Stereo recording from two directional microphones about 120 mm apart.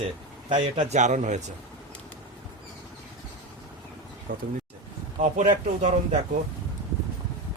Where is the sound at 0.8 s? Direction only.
80° right.